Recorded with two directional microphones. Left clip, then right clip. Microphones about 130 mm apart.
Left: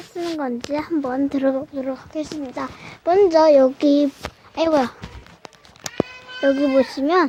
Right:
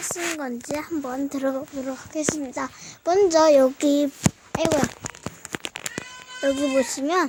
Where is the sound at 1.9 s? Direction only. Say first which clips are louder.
Right 1 dB; 30° right (ahead or behind).